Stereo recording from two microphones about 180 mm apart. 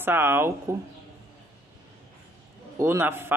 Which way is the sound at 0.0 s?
10° right (ahead or behind).